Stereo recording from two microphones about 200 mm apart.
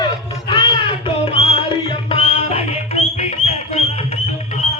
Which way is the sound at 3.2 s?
35° left (ahead or behind).